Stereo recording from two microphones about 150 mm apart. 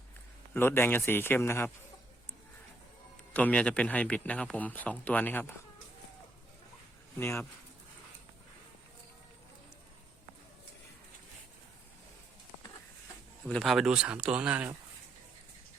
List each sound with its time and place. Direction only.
0.5 s a man's voice: 15° left (ahead or behind)
3.3 s a man's voice: 10° left (ahead or behind)
7.2 s a man's voice: 15° left (ahead or behind)
13.5 s speech: centre (ahead or behind)